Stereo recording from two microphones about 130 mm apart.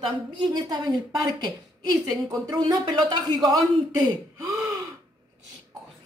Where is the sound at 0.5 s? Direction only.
35° right (ahead or behind).